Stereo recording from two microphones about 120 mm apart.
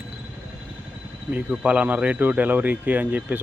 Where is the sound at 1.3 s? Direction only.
10° right (ahead or behind).